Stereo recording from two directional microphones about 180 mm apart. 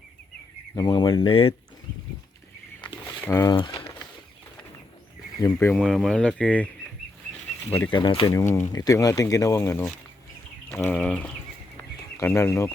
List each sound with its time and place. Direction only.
0.8 s speech: 25° left (ahead or behind)
3.2 s speech: 15° left (ahead or behind)
3.5 s speech: 25° left (ahead or behind)
5.4 s speech: 10° left (ahead or behind)
7.7 s speech: 10° left (ahead or behind)
7.9 s speech: 25° left (ahead or behind)
8.3 s speech: 15° left (ahead or behind)